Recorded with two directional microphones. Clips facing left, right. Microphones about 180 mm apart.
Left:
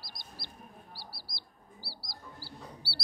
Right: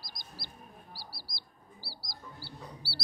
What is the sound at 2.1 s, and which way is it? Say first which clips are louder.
Chicken: right 2 dB; 40° left (ahead or behind).